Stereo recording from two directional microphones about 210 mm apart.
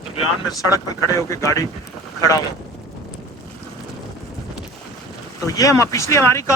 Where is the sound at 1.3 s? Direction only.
15° left (ahead or behind).